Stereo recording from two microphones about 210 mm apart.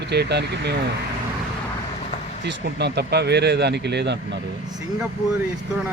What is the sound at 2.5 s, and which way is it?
Speech, 50° right (ahead or behind).